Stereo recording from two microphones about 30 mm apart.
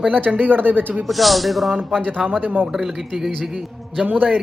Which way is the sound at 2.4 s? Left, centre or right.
Right.